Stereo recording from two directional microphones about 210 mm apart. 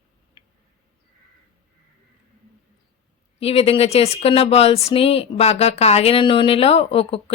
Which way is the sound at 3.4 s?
30° left (ahead or behind).